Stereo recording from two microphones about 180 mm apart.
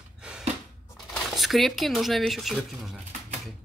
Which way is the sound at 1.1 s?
Centre (ahead or behind).